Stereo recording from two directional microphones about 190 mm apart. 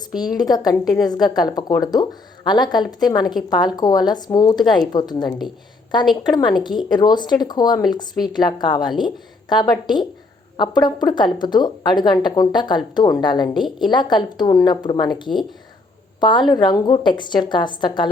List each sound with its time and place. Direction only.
0.2 s speech: 20° left (ahead or behind)
16.2 s speech: 25° left (ahead or behind)